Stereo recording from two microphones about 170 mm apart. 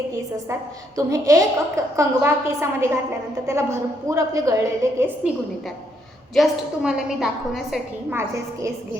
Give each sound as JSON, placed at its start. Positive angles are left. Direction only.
{"t": 0.9, "sound": "a woman's voice", "side_deg": -20}
{"t": 6.3, "sound": "a woman's voice", "side_deg": 0}